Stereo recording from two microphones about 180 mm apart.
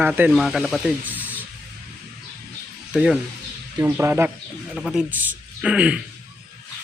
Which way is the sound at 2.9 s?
5° right (ahead or behind).